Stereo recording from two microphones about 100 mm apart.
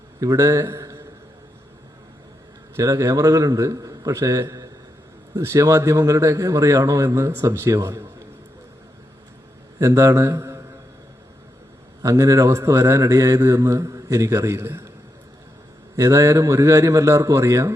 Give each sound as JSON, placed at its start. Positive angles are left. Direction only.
{"t": 0.2, "sound": "a man's voice", "side_deg": -35}
{"t": 2.7, "sound": "speech", "side_deg": -35}
{"t": 9.7, "sound": "speech", "side_deg": -30}
{"t": 12.0, "sound": "speech", "side_deg": -30}
{"t": 16.0, "sound": "speech", "side_deg": -30}